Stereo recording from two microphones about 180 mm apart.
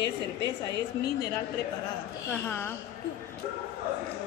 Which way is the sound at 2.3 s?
10° left (ahead or behind).